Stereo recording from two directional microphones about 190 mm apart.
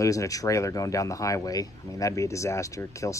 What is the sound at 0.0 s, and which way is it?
Speech, 15° left (ahead or behind).